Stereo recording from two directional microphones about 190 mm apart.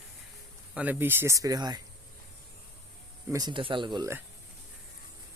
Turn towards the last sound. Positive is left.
turn(degrees=-25)  # may be behind; listen again after turning